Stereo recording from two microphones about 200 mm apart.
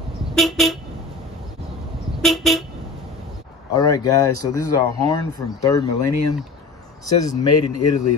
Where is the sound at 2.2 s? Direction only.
Centre (ahead or behind).